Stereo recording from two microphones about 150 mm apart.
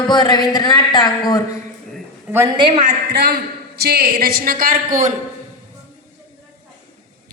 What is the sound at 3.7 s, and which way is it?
A man's voice, 90° right.